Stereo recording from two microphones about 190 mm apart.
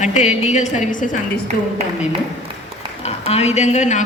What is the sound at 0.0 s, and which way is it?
Speech, 40° left (ahead or behind).